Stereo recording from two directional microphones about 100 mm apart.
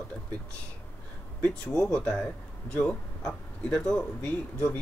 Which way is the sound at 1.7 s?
10° left (ahead or behind).